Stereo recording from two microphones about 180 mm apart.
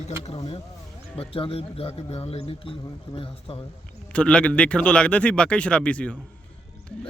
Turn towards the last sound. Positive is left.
turn(degrees=5)  # may be behind; listen again after turning